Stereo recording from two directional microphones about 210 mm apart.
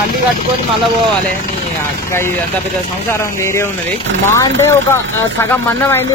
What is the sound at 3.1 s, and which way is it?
A man's voice, 10° left (ahead or behind).